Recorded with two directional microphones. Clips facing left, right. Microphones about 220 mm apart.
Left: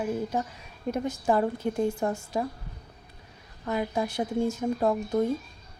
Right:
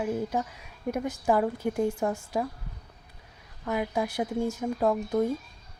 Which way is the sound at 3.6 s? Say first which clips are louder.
Even; 15° right (ahead or behind).